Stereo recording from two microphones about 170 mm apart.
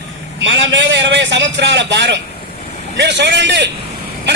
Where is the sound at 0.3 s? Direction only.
90° right.